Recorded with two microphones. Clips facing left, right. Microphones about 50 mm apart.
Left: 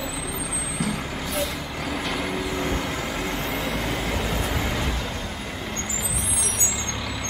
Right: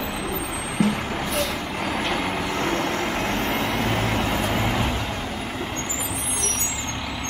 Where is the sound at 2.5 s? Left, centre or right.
Right.